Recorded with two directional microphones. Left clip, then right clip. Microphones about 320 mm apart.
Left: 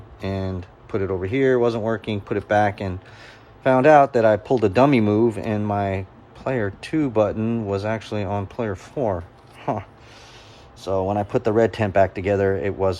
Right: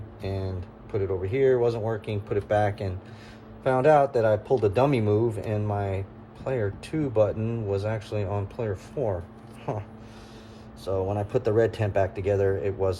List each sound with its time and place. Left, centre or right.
0.2 s speech: left
10.8 s speech: left